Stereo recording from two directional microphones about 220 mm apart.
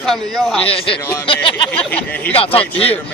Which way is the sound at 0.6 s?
25° left (ahead or behind).